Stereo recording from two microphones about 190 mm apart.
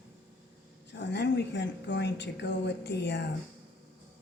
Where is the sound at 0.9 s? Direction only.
65° left (ahead or behind).